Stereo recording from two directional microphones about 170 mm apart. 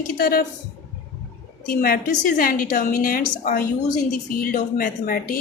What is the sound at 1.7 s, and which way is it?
A woman's voice, 60° left (ahead or behind).